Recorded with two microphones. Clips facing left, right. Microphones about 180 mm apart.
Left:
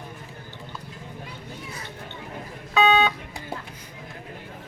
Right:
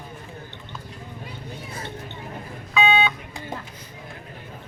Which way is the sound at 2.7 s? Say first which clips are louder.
Left 2 dB; 40° left (ahead or behind).